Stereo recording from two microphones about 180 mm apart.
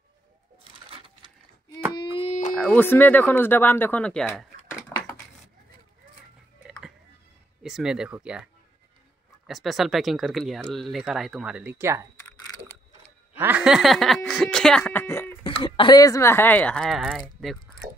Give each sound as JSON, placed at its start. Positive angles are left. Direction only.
{"t": 0.8, "sound": "sewing machine", "side_deg": -30}
{"t": 2.0, "sound": "a sound", "side_deg": 35}
{"t": 2.5, "sound": "speech", "side_deg": 5}
{"t": 7.6, "sound": "speech", "side_deg": -5}
{"t": 9.5, "sound": "speech", "side_deg": 0}
{"t": 13.4, "sound": "speech", "side_deg": -10}
{"t": 15.4, "sound": "speech", "side_deg": 30}